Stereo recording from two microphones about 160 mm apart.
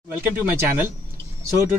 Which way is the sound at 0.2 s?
15° right (ahead or behind).